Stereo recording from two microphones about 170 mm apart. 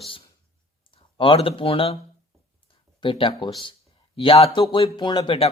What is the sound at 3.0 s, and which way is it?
Speech, 30° left (ahead or behind).